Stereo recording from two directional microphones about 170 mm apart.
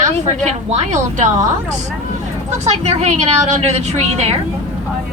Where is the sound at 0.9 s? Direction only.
45° right (ahead or behind).